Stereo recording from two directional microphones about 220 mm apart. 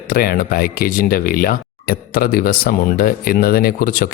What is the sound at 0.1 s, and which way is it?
Speech, 40° left (ahead or behind).